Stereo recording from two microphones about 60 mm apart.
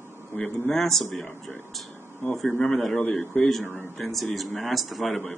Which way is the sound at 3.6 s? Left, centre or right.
Left.